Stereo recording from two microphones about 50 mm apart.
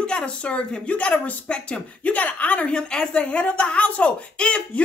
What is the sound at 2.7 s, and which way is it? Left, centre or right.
A woman's voice, centre.